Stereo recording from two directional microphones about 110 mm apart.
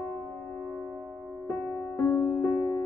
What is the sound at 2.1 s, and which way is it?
Music, 15° left (ahead or behind).